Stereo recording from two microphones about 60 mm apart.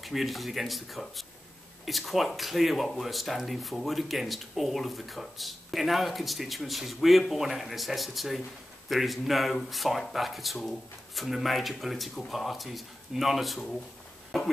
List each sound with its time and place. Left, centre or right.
0.0 s speech: centre